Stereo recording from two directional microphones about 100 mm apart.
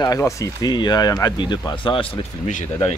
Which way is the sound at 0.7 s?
45° left (ahead or behind).